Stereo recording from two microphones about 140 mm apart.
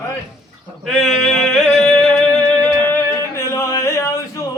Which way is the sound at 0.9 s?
Centre (ahead or behind).